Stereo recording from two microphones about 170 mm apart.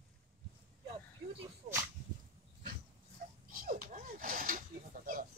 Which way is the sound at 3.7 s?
50° right (ahead or behind).